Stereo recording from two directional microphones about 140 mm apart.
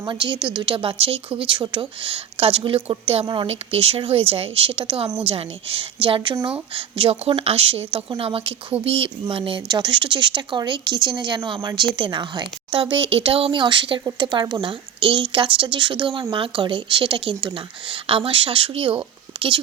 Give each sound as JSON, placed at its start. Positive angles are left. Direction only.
{"t": 0.0, "sound": "a woman's voice", "side_deg": -35}